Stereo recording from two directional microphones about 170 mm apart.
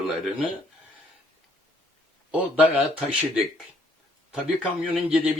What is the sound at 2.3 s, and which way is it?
Speech, 5° right (ahead or behind).